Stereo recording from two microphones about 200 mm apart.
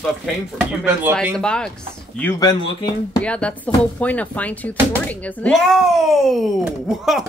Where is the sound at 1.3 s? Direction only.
5° left (ahead or behind).